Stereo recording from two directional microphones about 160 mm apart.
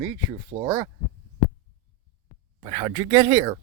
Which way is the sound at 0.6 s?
20° right (ahead or behind).